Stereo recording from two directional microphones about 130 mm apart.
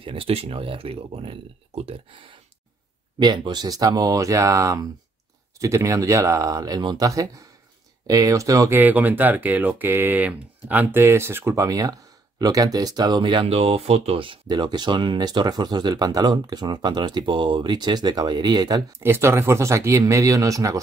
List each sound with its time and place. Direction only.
0.0 s speech: 45° right (ahead or behind)
3.2 s speech: 35° right (ahead or behind)
8.7 s speech: 15° right (ahead or behind)